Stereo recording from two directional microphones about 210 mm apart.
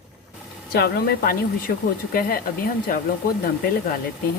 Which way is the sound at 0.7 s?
50° left (ahead or behind).